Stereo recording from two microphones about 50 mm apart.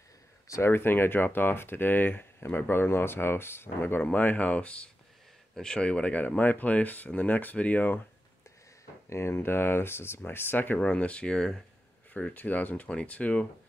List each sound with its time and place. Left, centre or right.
0.7 s speech: left
4.0 s speech: left
9.1 s speech: left
10.9 s speech: left
12.4 s speech: left